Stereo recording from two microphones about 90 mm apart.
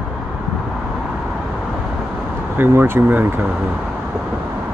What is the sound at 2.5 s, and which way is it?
Speech, 25° right (ahead or behind).